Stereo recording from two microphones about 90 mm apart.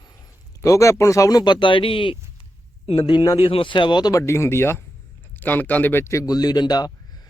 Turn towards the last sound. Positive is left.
turn(degrees=50)  # may be behind; listen again after turning